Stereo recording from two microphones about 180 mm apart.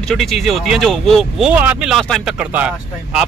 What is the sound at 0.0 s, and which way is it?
Speech, centre (ahead or behind).